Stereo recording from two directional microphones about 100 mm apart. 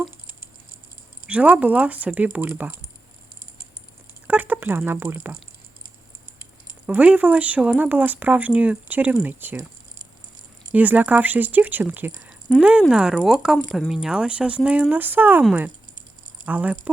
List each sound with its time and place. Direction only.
1.3 s speech: 15° right (ahead or behind)
4.3 s speech: 15° right (ahead or behind)
6.8 s speech: 10° right (ahead or behind)
10.7 s speech: 15° right (ahead or behind)
16.5 s speech: 15° right (ahead or behind)